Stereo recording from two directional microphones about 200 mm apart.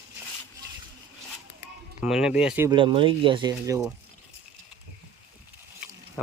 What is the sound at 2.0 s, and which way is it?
Speech, 5° right (ahead or behind).